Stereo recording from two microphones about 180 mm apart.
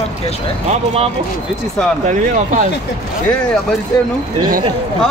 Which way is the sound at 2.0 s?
45° right (ahead or behind).